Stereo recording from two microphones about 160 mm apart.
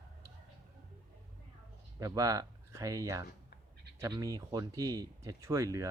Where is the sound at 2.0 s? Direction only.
20° right (ahead or behind).